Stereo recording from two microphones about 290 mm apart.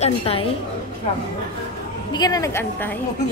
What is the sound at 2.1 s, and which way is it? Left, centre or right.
Speech, centre.